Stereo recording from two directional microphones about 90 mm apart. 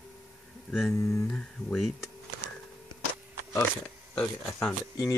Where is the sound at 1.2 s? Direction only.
10° left (ahead or behind).